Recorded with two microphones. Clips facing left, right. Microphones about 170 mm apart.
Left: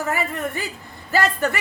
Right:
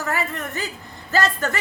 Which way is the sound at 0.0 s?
15° left (ahead or behind).